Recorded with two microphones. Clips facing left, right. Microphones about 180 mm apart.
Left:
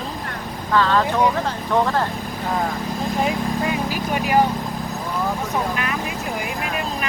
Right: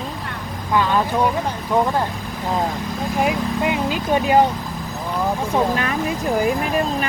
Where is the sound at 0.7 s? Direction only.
15° right (ahead or behind).